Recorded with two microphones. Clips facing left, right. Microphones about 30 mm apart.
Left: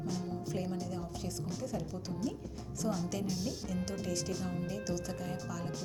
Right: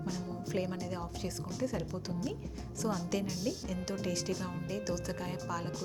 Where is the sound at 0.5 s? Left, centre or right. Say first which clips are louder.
Right 5 dB; right.